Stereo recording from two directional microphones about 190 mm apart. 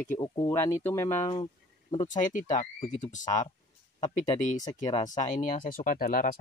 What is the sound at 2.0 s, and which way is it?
Speech, 40° left (ahead or behind).